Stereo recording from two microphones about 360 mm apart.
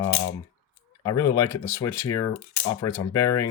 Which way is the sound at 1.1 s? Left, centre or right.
Left.